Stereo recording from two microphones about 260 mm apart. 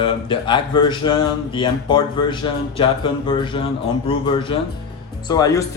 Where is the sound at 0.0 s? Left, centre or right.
Centre.